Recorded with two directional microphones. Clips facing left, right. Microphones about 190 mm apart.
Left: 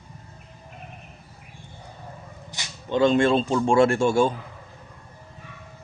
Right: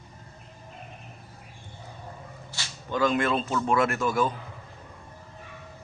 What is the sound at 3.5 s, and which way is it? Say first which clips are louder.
Speech: left 6 dB; 30° left (ahead or behind).